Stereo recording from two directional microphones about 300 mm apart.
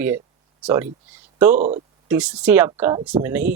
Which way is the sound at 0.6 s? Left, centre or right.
Centre.